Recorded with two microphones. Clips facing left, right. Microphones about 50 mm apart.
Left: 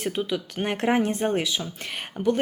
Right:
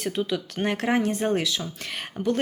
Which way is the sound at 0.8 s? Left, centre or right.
Left.